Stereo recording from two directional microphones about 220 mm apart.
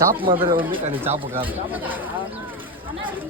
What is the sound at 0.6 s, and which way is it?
Speech, 25° right (ahead or behind).